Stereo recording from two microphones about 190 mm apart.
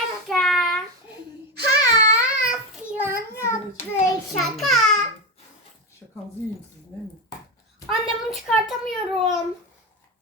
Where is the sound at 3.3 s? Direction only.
15° left (ahead or behind).